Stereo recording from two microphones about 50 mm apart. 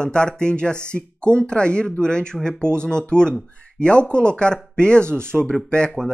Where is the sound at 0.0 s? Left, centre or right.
Centre.